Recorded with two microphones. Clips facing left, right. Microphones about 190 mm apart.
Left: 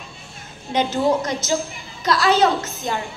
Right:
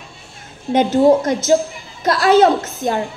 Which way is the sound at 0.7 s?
50° right (ahead or behind).